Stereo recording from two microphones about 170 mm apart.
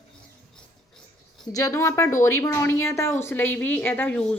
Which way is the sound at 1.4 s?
20° left (ahead or behind).